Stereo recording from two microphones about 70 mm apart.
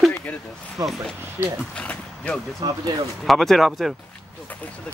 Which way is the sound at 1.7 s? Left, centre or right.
Centre.